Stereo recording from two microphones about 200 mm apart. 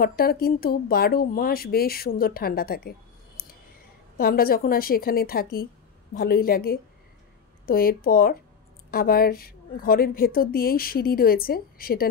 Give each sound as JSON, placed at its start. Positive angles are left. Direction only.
{"t": 0.0, "sound": "a woman's voice", "side_deg": 50}
{"t": 4.2, "sound": "a woman's voice", "side_deg": 50}